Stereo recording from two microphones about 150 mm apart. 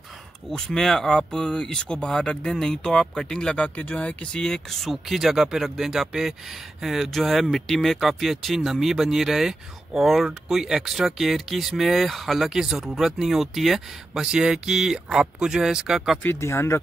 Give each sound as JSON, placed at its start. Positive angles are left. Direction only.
{"t": 0.5, "sound": "speech", "side_deg": 5}
{"t": 16.2, "sound": "speech", "side_deg": 15}